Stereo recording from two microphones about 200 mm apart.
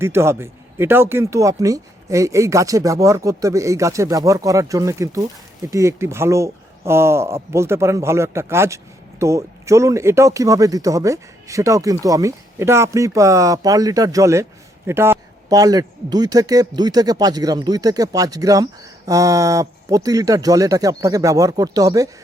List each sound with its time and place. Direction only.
0.0 s speech: 10° right (ahead or behind)